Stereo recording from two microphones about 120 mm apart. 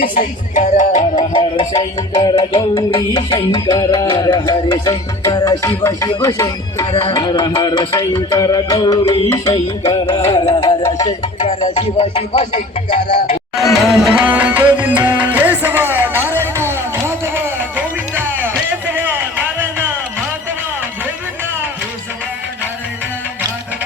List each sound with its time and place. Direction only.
0.5 s music: 85° left
1.3 s music: 45° left (ahead or behind)
3.1 s music: 35° left (ahead or behind)
6.8 s music: 50° left (ahead or behind)
10.8 s music: 30° left (ahead or behind)
11.3 s speech: 65° left (ahead or behind); by 13.4 s 85° left
13.9 s music: 5° right (ahead or behind)